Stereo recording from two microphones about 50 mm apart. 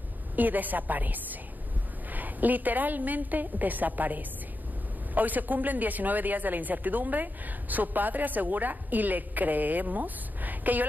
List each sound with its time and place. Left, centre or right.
0.4 s a woman's voice: right